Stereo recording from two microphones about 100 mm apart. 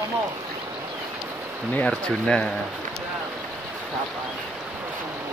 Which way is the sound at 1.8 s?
10° left (ahead or behind).